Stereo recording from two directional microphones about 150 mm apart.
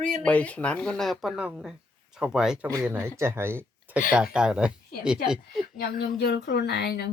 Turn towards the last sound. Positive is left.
turn(degrees=90)